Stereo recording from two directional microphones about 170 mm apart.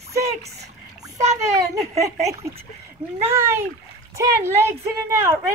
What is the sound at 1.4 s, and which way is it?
A child's voice, 20° right (ahead or behind).